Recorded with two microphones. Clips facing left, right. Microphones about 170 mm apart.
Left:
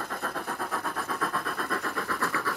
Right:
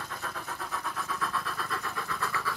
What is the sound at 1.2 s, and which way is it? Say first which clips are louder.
Vehicle: left 3 dB; 50° left (ahead or behind).